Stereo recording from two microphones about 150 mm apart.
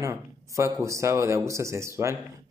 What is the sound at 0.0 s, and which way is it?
Speech, 20° right (ahead or behind).